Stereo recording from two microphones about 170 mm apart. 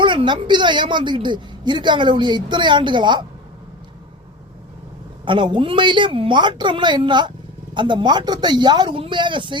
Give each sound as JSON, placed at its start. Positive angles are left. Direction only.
{"t": 0.0, "sound": "a woman's voice", "side_deg": -30}
{"t": 5.2, "sound": "a woman's voice", "side_deg": -30}